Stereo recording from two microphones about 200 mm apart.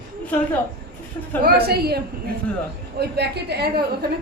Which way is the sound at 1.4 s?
50° right (ahead or behind).